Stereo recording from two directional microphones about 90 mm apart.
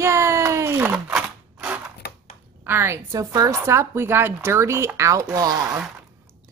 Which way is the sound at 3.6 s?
30° right (ahead or behind).